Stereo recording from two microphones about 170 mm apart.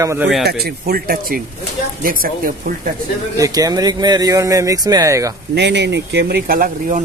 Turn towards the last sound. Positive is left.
turn(degrees=-50)  # may be behind; listen again after turning